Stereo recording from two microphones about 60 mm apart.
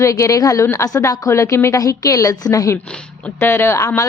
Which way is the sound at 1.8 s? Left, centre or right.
Left.